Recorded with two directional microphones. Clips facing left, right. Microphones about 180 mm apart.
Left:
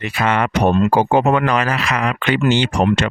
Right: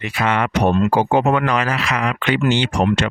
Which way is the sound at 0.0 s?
40° left (ahead or behind).